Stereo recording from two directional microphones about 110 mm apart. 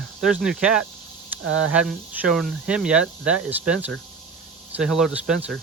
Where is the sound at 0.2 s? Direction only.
5° right (ahead or behind).